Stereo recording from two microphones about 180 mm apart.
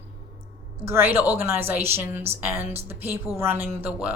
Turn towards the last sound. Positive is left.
turn(degrees=-10)  # may be behind; listen again after turning